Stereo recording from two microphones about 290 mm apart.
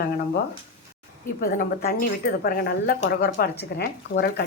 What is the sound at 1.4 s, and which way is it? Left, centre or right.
A woman's voice, left.